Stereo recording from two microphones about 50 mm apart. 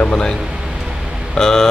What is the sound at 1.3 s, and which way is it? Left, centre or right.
Speech, centre.